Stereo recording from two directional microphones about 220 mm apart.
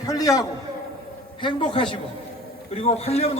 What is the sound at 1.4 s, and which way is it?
A man's voice, 25° left (ahead or behind).